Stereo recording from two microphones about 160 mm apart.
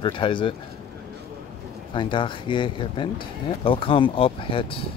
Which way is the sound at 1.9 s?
30° left (ahead or behind).